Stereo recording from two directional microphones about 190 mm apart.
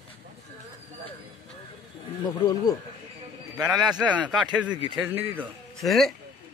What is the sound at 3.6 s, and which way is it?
Speech, 5° right (ahead or behind).